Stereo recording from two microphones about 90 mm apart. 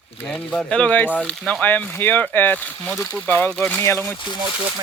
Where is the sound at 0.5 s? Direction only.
10° left (ahead or behind).